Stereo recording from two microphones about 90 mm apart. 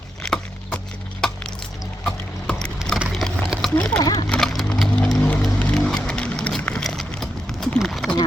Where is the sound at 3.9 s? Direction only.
45° left (ahead or behind).